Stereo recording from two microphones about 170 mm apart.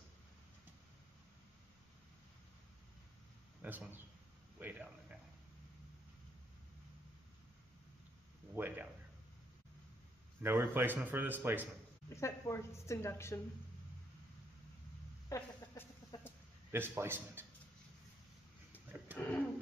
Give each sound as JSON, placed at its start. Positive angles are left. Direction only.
{"t": 3.6, "sound": "a man's voice", "side_deg": -10}
{"t": 8.5, "sound": "speech", "side_deg": -10}
{"t": 10.4, "sound": "speech", "side_deg": -15}
{"t": 12.2, "sound": "a woman's voice", "side_deg": 15}
{"t": 15.2, "sound": "chicken", "side_deg": 20}
{"t": 16.7, "sound": "speech", "side_deg": -15}
{"t": 19.1, "sound": "a sound", "side_deg": 10}